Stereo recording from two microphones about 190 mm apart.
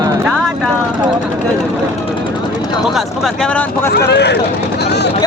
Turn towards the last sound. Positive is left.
turn(degrees=60)  # may be behind; listen again after turning